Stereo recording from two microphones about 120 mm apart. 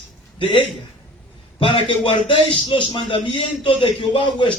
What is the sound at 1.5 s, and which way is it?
A man's voice, 45° left (ahead or behind).